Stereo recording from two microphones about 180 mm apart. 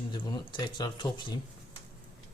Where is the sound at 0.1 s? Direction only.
25° left (ahead or behind).